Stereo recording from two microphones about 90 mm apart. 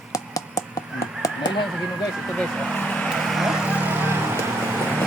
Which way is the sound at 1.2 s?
40° left (ahead or behind).